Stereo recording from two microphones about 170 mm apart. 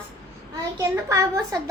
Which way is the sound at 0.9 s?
15° right (ahead or behind).